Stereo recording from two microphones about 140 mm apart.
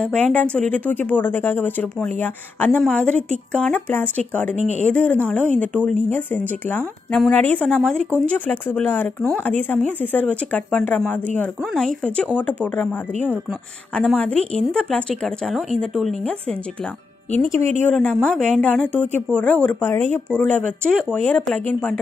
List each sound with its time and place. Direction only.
0.0 s speech: 10° left (ahead or behind)
4.6 s speech: 55° right (ahead or behind)
4.9 s speech: 10° left (ahead or behind)
17.3 s speech: 15° left (ahead or behind)
17.6 s speech: 55° right (ahead or behind)
17.9 s speech: 5° left (ahead or behind)